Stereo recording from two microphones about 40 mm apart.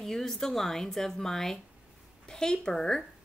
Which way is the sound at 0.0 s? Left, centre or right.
Centre.